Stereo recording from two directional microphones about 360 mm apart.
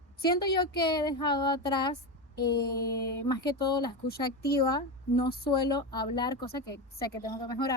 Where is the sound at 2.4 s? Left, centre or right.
Left.